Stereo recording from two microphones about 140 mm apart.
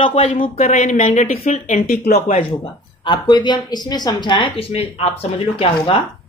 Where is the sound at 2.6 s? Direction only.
35° left (ahead or behind).